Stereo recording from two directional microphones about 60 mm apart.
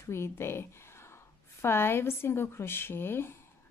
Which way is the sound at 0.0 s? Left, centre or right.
Left.